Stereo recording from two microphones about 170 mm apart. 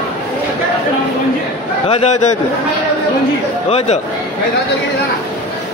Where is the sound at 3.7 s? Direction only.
40° left (ahead or behind).